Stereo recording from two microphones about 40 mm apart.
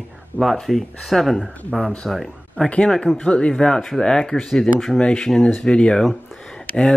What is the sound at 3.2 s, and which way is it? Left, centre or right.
Speech, left.